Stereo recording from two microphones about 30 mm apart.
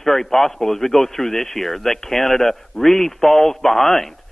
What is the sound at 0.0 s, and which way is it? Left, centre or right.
A man's voice, centre.